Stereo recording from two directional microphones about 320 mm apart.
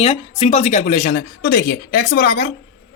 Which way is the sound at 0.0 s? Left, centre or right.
Centre.